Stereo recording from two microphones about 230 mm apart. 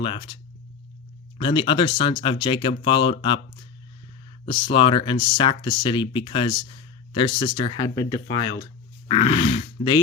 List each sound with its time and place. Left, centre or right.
0.0 s speech: left
1.4 s speech: left
4.4 s speech: left